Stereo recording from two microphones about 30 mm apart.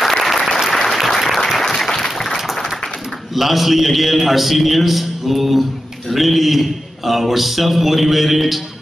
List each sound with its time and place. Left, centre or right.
0.0 s applause: centre
1.6 s applause: centre
3.3 s a man's voice: centre